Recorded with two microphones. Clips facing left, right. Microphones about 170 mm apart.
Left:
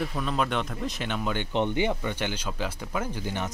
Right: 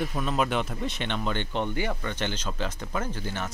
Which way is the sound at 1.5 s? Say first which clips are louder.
Left 3 dB; 20° left (ahead or behind).